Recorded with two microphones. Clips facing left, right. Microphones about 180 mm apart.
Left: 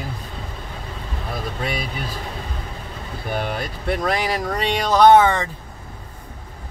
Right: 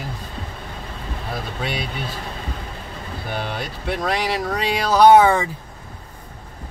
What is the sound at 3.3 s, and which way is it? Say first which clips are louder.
Speech: left 3 dB; centre (ahead or behind).